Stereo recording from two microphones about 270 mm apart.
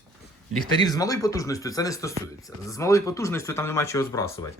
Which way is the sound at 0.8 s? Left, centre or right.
Centre.